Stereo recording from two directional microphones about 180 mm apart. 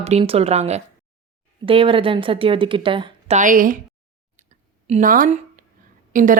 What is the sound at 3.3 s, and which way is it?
Speech, 45° right (ahead or behind).